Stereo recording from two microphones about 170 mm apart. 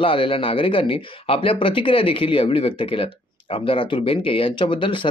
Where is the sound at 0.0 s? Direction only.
30° left (ahead or behind).